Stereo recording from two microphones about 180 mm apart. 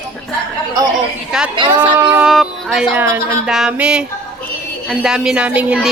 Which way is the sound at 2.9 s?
15° right (ahead or behind).